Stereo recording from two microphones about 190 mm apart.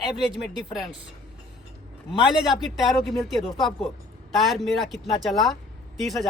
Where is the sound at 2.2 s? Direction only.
Centre (ahead or behind).